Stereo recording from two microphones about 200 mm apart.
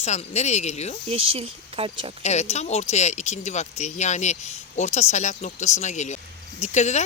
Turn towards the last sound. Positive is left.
turn(degrees=35)  # may be behind; listen again after turning